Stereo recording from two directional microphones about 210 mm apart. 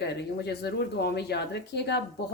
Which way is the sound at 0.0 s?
50° left (ahead or behind).